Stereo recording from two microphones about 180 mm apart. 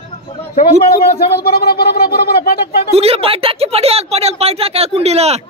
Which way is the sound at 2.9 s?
35° right (ahead or behind).